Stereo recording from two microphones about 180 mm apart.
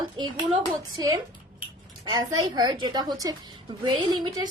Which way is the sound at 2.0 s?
20° right (ahead or behind).